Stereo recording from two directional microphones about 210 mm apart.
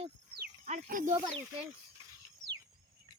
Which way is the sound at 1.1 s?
20° right (ahead or behind).